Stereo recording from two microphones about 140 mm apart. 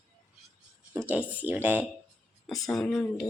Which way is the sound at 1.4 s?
10° right (ahead or behind).